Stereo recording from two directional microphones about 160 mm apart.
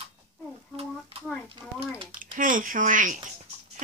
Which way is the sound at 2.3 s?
55° right (ahead or behind).